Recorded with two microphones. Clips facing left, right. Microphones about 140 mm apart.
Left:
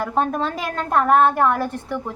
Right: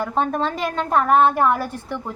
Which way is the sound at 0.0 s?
Centre (ahead or behind).